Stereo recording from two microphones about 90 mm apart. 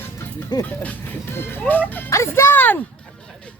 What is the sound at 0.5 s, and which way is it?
Speech, 55° left (ahead or behind).